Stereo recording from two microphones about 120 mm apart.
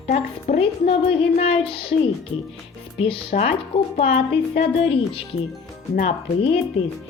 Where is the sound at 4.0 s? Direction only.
55° left (ahead or behind).